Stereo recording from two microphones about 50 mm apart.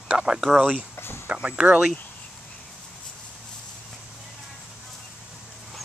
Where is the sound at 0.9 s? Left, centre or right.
Left.